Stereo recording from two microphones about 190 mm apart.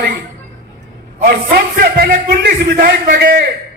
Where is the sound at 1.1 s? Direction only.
50° right (ahead or behind).